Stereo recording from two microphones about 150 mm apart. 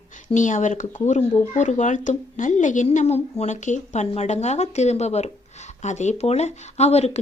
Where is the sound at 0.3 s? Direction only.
55° left (ahead or behind).